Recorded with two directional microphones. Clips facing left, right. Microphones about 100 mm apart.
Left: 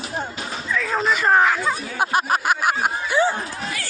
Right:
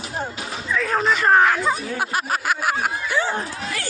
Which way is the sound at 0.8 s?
Centre (ahead or behind).